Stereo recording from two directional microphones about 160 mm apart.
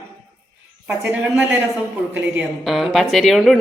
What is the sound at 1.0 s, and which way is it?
A woman's voice, 10° right (ahead or behind).